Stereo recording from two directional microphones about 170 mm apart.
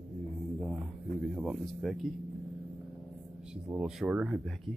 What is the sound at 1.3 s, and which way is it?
Speech, centre (ahead or behind).